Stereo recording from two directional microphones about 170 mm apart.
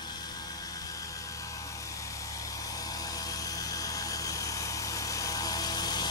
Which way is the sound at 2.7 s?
20° left (ahead or behind).